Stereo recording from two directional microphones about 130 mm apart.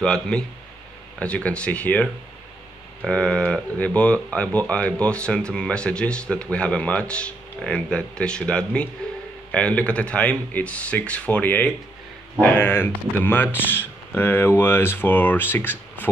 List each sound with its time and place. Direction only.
0.0 s speech: 5° left (ahead or behind)
3.1 s speech: 5° left (ahead or behind)